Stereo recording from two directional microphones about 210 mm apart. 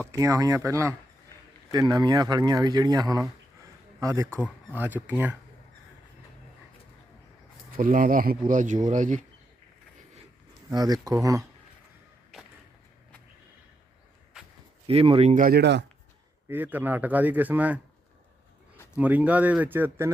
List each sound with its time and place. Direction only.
0.1 s speech: 15° right (ahead or behind)
4.3 s speech: 5° left (ahead or behind)
4.7 s speech: 10° right (ahead or behind)
7.7 s speech: 40° right (ahead or behind)
10.7 s speech: 20° right (ahead or behind)
14.8 s speech: 25° right (ahead or behind); by 15.8 s 50° right (ahead or behind)
16.5 s speech: 10° right (ahead or behind)
18.9 s speech: 5° right (ahead or behind)